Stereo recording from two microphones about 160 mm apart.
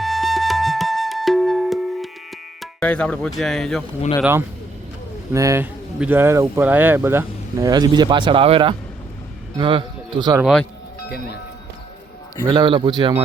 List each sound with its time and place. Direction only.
0.0 s flute: centre (ahead or behind)
2.6 s speech: 10° left (ahead or behind)
4.2 s a man's voice: 15° right (ahead or behind)
7.7 s a man's voice: 25° right (ahead or behind)
10.4 s speech: 5° left (ahead or behind)
12.5 s a man's voice: 30° right (ahead or behind)